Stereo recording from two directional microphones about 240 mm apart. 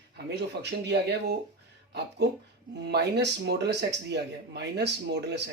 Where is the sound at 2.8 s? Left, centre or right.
Right.